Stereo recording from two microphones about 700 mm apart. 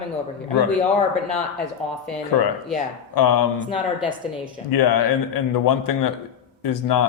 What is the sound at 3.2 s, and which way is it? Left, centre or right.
Speech, left.